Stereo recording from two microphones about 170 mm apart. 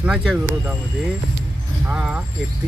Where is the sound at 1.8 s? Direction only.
10° right (ahead or behind).